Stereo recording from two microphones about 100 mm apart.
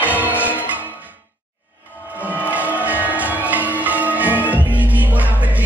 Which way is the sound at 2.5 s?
15° right (ahead or behind).